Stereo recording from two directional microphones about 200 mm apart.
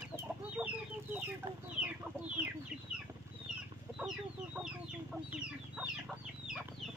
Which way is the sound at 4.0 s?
5° right (ahead or behind).